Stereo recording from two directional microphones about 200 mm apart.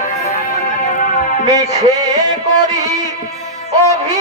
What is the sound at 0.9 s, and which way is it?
Music, 40° left (ahead or behind).